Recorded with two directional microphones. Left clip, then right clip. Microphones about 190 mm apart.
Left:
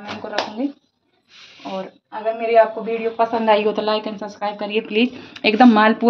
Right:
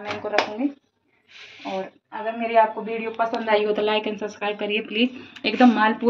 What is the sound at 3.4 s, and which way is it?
Speech, 40° left (ahead or behind).